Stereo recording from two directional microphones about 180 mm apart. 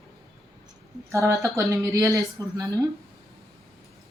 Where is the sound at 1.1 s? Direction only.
15° right (ahead or behind).